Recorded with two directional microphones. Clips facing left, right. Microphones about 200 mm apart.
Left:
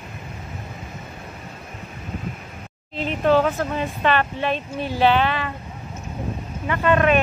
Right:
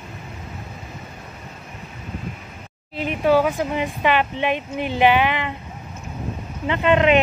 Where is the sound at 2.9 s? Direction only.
10° right (ahead or behind).